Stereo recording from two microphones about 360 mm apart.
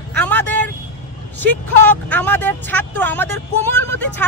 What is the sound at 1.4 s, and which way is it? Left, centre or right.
Speech, centre.